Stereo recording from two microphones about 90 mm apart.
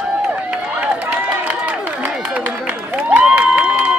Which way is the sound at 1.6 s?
15° right (ahead or behind).